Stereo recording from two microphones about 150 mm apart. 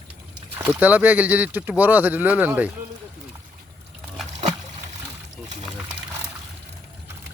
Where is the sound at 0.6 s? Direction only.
10° right (ahead or behind).